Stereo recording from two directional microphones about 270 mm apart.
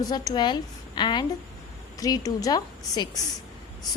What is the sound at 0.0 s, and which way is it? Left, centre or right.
A woman's voice, centre.